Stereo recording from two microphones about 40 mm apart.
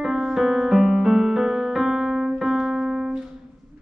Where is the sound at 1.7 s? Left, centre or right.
Centre.